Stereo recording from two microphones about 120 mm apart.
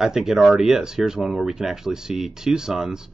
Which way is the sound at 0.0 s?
5° right (ahead or behind).